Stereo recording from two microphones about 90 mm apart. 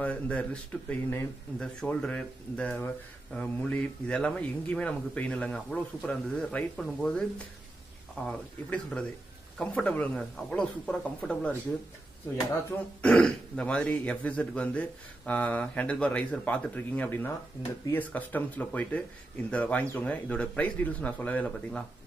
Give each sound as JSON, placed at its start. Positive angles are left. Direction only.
{"t": 0.0, "sound": "a man's voice", "side_deg": 15}
{"t": 8.3, "sound": "a man's voice", "side_deg": 15}
{"t": 13.0, "sound": "a man's voice", "side_deg": 15}